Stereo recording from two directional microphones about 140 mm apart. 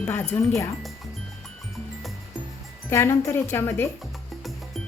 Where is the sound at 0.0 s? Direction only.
10° left (ahead or behind).